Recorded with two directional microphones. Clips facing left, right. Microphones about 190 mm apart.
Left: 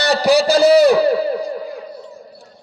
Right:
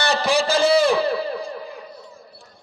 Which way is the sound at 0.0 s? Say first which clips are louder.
Left 6 dB; 35° left (ahead or behind).